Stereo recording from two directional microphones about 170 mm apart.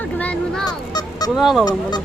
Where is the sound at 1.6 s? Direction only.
25° left (ahead or behind).